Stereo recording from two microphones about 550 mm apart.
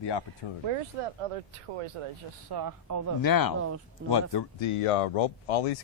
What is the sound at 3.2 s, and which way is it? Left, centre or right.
Speech, left.